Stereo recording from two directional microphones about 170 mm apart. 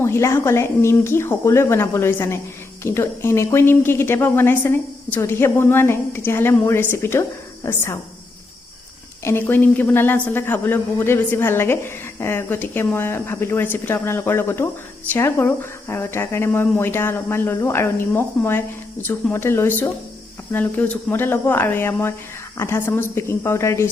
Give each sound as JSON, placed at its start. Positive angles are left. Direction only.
{"t": 0.0, "sound": "speech", "side_deg": 15}
{"t": 9.2, "sound": "speech", "side_deg": 10}